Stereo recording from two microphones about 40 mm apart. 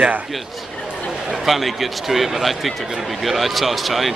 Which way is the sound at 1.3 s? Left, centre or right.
Centre.